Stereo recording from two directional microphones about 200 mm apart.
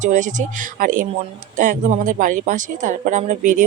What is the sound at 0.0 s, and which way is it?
Speech, 40° right (ahead or behind).